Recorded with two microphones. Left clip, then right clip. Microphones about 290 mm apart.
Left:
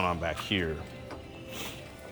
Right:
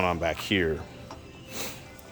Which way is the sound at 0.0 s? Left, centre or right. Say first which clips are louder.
Right 4 dB; centre.